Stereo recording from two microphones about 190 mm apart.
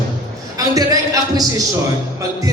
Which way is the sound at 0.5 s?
20° right (ahead or behind).